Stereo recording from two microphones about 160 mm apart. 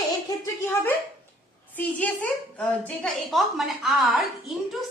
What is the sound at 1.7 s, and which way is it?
A woman's voice, 10° left (ahead or behind).